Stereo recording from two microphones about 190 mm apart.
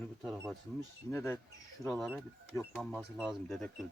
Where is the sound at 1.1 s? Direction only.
15° left (ahead or behind).